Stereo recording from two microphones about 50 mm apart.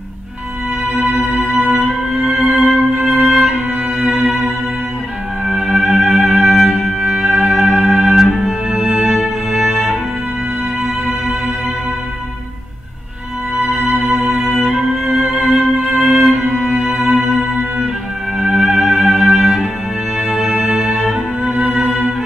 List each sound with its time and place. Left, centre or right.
0.9 s music: centre
7.0 s music: centre
8.6 s music: centre
9.1 s music: centre
13.7 s music: centre
18.4 s music: centre
21.5 s music: right